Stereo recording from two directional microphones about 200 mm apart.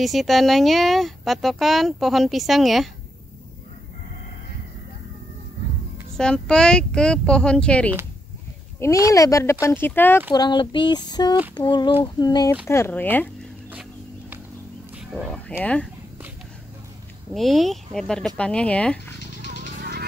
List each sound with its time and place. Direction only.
0.0 s speech: centre (ahead or behind)
6.1 s speech: 5° left (ahead or behind)
10.3 s child singing: 20° left (ahead or behind)
12.6 s speech: 15° left (ahead or behind)
15.0 s frog: 5° right (ahead or behind)
15.3 s speech: 5° left (ahead or behind)
17.3 s speech: centre (ahead or behind)
19.6 s a sound: 50° right (ahead or behind)